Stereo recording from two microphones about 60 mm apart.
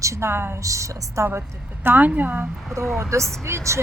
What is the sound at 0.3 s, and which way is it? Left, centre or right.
Speech, right.